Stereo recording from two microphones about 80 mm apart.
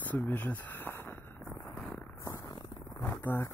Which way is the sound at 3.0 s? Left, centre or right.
Left.